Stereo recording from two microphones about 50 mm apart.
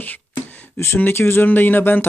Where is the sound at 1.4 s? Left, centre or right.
Left.